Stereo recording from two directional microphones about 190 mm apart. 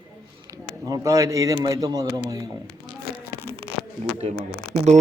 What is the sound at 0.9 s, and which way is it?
A man's voice, 20° right (ahead or behind).